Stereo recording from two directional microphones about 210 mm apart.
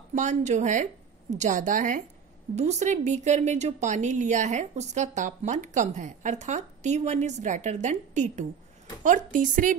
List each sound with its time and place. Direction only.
0.1 s a woman's voice: 35° right (ahead or behind)